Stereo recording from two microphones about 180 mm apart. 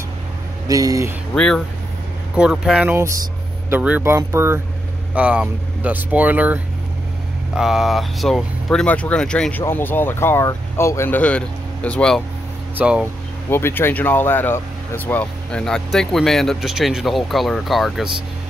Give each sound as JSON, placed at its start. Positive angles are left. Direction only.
{"t": 0.7, "sound": "speech", "side_deg": -20}
{"t": 1.3, "sound": "speech", "side_deg": 5}
{"t": 12.7, "sound": "speech", "side_deg": -10}
{"t": 13.5, "sound": "speech", "side_deg": 15}